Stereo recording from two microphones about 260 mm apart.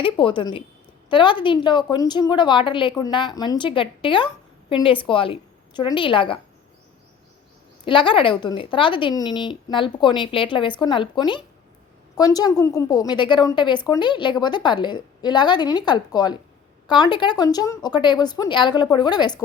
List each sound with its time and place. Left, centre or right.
0.0 s a woman's voice: centre
7.9 s a woman's voice: centre